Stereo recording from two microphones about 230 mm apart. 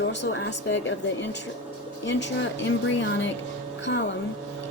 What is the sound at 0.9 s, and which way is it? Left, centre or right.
Speech, left.